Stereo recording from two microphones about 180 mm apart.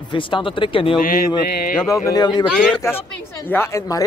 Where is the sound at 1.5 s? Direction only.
50° left (ahead or behind).